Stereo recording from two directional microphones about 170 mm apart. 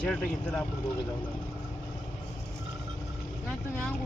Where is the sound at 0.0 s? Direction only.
10° left (ahead or behind).